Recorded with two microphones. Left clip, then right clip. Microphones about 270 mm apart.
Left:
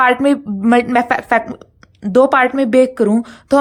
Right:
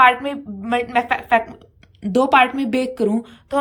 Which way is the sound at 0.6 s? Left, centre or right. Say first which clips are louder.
Left 6 dB; centre.